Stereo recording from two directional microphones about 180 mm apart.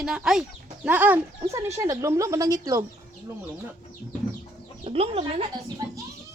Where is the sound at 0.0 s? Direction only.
5° right (ahead or behind); by 2.8 s 20° right (ahead or behind).